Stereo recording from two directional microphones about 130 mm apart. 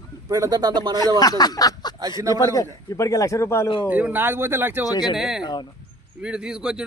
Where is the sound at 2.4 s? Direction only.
25° left (ahead or behind).